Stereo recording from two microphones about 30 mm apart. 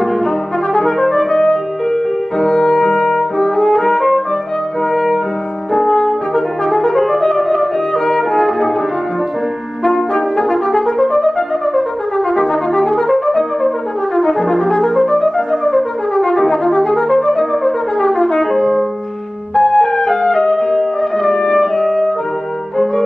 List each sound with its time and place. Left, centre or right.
0.7 s brass instrument: centre
1.3 s music: centre
2.8 s brass instrument: centre
3.6 s music: left
4.9 s music: centre
5.9 s brass instrument: centre
7.3 s music: centre
8.5 s french horn: centre
10.5 s brass instrument: centre
19.5 s music: left; by 20.8 s centre
21.4 s music: left
21.7 s music: centre